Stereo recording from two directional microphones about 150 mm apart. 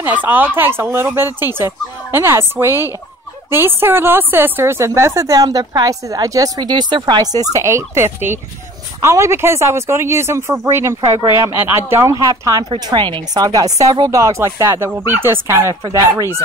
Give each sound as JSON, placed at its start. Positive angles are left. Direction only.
{"t": 0.0, "sound": "speech", "side_deg": -10}
{"t": 15.7, "sound": "speech", "side_deg": -30}
{"t": 16.1, "sound": "speech", "side_deg": -15}